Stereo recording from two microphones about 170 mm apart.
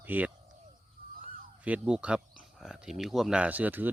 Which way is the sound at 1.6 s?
5° right (ahead or behind).